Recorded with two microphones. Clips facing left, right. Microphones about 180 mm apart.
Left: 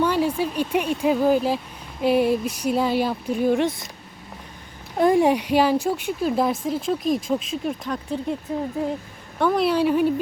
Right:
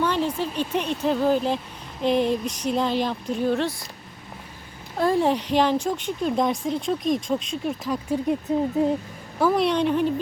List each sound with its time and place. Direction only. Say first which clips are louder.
0.0 s speech: left 3 dB; 10° left (ahead or behind)
4.9 s speech: left 3 dB; 15° left (ahead or behind)
8.1 s speech: right 4 dB; 15° right (ahead or behind)
9.4 s speech: left 1 dB; centre (ahead or behind)